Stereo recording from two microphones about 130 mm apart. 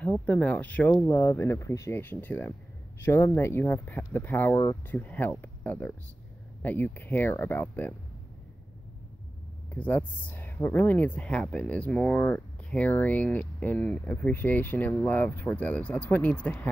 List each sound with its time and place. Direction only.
0.0 s speech: 10° left (ahead or behind)
9.8 s speech: 15° left (ahead or behind)